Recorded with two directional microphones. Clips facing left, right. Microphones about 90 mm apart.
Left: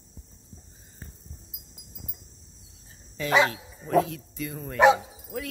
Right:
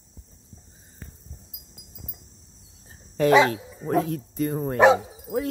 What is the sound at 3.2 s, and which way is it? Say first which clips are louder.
Speech: right 5 dB; 45° right (ahead or behind).